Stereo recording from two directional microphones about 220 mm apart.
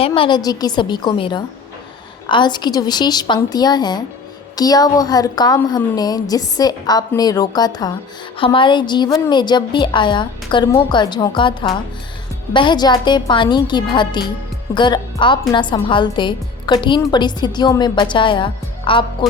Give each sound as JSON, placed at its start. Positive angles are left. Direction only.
{"t": 0.0, "sound": "a woman's voice", "side_deg": 25}